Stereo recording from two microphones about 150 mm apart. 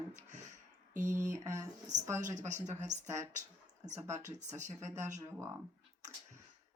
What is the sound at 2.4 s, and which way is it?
Speech, 50° right (ahead or behind).